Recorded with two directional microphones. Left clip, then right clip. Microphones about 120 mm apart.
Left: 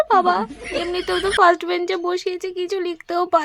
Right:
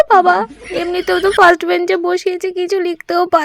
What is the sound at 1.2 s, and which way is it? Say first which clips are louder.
Speech: right 6 dB; centre (ahead or behind).